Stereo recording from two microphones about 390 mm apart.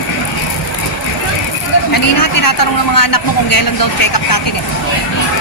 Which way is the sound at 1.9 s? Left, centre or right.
Left.